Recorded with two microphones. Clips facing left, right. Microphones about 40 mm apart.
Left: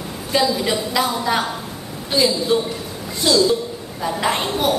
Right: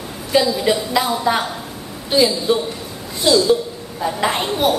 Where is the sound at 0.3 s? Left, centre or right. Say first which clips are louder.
Right 3 dB; centre.